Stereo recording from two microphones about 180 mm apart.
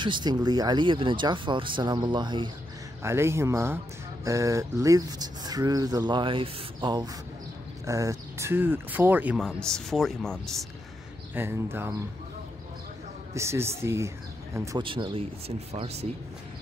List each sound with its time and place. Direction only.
0.0 s speech: 25° right (ahead or behind)
3.0 s speech: 15° right (ahead or behind); by 10.7 s 5° left (ahead or behind)
11.3 s speech: 10° right (ahead or behind)
13.3 s speech: 15° right (ahead or behind)
14.8 s speech: 30° right (ahead or behind)